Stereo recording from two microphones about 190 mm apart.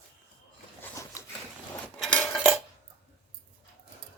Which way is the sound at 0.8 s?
15° left (ahead or behind).